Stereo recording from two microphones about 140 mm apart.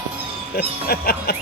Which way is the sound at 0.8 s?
90° left.